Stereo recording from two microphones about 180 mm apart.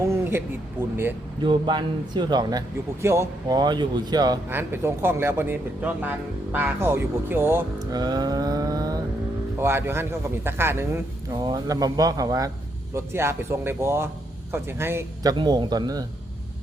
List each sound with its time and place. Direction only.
0.1 s speech: 10° right (ahead or behind)
1.4 s speech: 25° right (ahead or behind)